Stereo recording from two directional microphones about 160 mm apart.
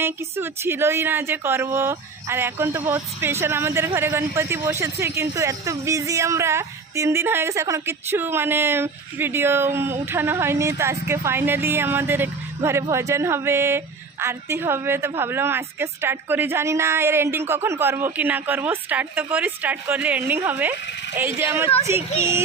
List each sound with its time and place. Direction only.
0.0 s speech: 15° right (ahead or behind)